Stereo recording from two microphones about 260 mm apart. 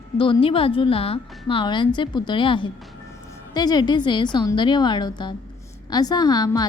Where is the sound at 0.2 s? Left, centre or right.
Centre.